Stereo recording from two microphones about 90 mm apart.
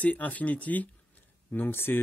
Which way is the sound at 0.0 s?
15° left (ahead or behind).